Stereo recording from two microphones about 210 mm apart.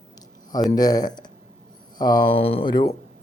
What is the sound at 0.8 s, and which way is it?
Speech, 20° left (ahead or behind).